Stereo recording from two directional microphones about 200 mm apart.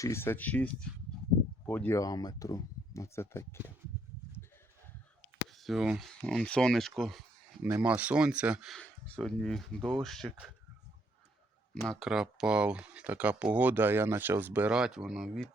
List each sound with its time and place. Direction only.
0.0 s speech: 10° left (ahead or behind)
5.5 s speech: centre (ahead or behind)
11.7 s speech: centre (ahead or behind)